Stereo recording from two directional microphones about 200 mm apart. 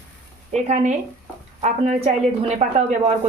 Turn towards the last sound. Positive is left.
turn(degrees=-35)  # may be behind; listen again after turning